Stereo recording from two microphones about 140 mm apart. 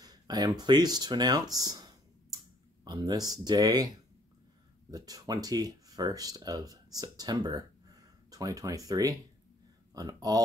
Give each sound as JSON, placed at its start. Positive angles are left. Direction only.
{"t": 0.0, "sound": "speech", "side_deg": -30}
{"t": 2.3, "sound": "a sound", "side_deg": -30}
{"t": 4.9, "sound": "speech", "side_deg": -25}